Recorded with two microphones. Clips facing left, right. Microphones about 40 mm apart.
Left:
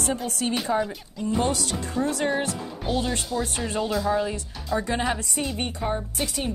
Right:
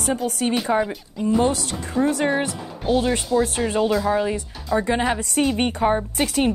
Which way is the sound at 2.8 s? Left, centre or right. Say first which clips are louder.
Right 7 dB; centre.